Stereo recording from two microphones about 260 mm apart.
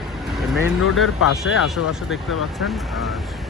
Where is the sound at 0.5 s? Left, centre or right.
Centre.